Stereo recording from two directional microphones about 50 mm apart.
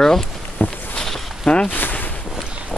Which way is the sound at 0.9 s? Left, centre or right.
Centre.